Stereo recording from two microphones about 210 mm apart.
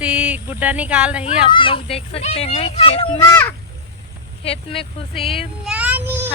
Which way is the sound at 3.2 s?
10° left (ahead or behind).